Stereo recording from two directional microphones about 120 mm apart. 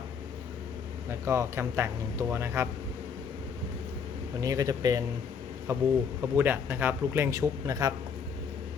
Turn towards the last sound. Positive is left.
turn(degrees=-30)  # may be behind; listen again after turning